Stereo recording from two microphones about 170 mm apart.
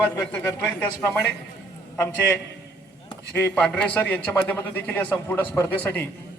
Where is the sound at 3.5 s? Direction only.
10° left (ahead or behind).